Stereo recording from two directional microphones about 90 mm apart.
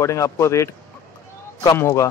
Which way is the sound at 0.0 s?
35° left (ahead or behind).